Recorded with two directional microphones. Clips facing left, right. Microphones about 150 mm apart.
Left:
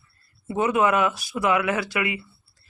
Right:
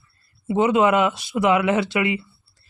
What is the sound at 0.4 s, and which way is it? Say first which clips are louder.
Speech: right 4 dB; 20° right (ahead or behind).